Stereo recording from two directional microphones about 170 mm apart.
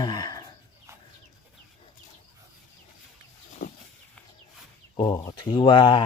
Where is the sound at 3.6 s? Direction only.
65° left (ahead or behind).